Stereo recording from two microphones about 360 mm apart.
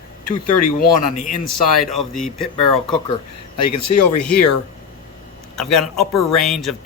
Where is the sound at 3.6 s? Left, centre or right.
Left.